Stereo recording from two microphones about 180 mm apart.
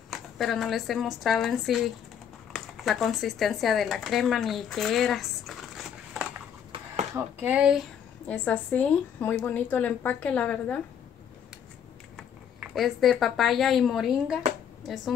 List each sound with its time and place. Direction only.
0.1 s speech: centre (ahead or behind)
7.2 s speech: 10° right (ahead or behind)
8.3 s a woman's voice: 10° left (ahead or behind)
12.2 s speech: centre (ahead or behind)